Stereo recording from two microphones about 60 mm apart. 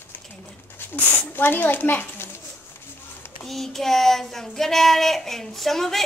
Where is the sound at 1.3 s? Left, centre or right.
Left.